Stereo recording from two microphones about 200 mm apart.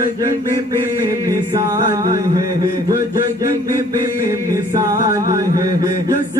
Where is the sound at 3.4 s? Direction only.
15° right (ahead or behind).